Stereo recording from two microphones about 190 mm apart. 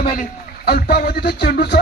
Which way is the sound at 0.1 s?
50° left (ahead or behind).